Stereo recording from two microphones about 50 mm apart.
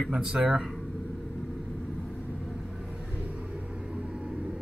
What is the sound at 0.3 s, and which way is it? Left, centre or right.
Speech, centre.